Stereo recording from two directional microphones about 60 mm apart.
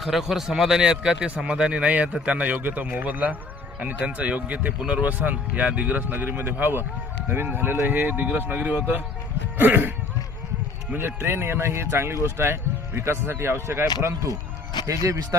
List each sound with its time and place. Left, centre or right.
0.0 s speech: centre; by 6.0 s right
6.0 s speech: right
10.9 s speech: right
15.0 s speech: right